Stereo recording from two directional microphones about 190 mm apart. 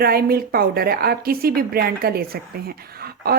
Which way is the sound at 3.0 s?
55° right (ahead or behind).